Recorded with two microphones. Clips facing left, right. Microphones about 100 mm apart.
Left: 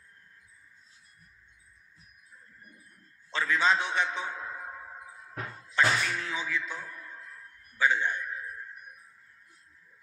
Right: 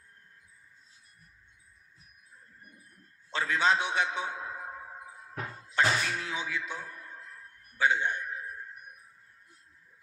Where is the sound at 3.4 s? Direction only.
45° right (ahead or behind).